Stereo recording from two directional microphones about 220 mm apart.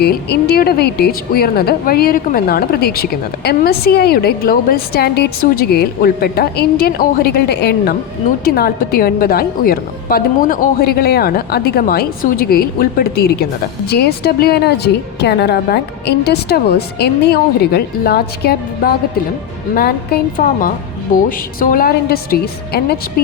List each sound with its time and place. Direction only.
0.0 s a woman's voice: 45° left (ahead or behind)
20.3 s a woman's voice: 40° left (ahead or behind)